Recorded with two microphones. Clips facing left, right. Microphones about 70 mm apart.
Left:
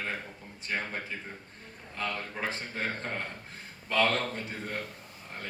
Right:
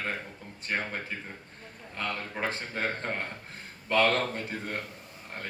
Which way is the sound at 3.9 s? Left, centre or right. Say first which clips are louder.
Right 2 dB; right.